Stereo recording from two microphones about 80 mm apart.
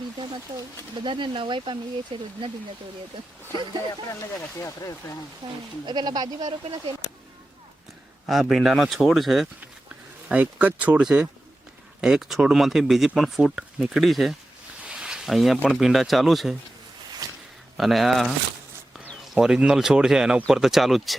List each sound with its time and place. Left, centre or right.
0.9 s speech: right
4.5 s speech: left
5.4 s speech: right
5.8 s speech: right
8.3 s speech: centre
10.2 s speech: centre
14.8 s a sound: centre
15.7 s speech: centre
17.2 s a sound: right
17.7 s speech: centre